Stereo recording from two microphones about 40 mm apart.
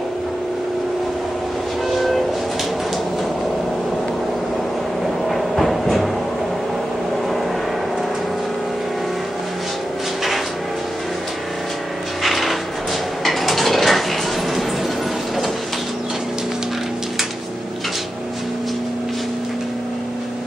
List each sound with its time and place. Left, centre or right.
1.9 s train: centre
5.3 s train: centre
12.2 s a sound: centre
13.2 s mechanisms: centre